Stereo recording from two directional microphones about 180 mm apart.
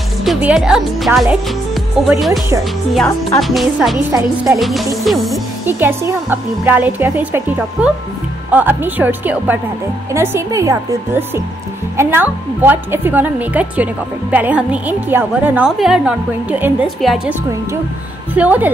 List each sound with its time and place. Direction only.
0.2 s speech: 5° right (ahead or behind)
4.1 s speech: 20° right (ahead or behind)
4.6 s music: centre (ahead or behind)
5.7 s a woman's voice: 10° right (ahead or behind)